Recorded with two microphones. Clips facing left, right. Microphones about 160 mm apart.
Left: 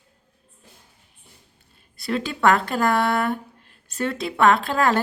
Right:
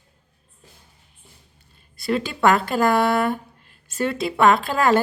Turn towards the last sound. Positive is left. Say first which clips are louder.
# right 2 dB
turn(degrees=0)  # may be behind; listen again after turning